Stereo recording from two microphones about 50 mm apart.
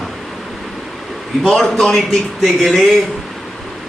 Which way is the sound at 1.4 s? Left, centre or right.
Centre.